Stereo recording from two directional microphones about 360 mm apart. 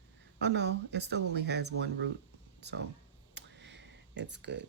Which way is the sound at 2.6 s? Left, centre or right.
Right.